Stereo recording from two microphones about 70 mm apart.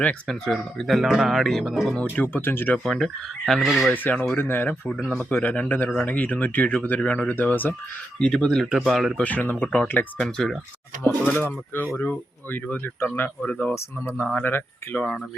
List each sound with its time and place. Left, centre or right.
0.0 s speech: centre
2.2 s speech: left
2.8 s speech: centre
3.9 s speech: left
8.2 s speech: centre
9.1 s speech: left
10.2 s speech: centre
11.3 s speech: left
13.7 s speech: left